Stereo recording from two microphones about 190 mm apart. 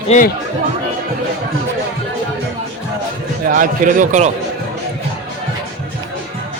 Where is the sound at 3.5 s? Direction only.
45° right (ahead or behind).